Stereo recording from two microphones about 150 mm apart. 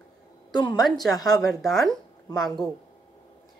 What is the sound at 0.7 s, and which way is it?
Speech, centre (ahead or behind).